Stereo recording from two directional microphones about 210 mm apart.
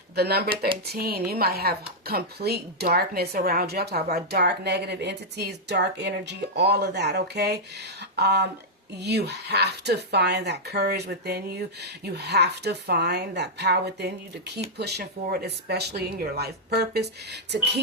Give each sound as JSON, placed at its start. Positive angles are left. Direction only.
{"t": 0.2, "sound": "speech", "side_deg": -50}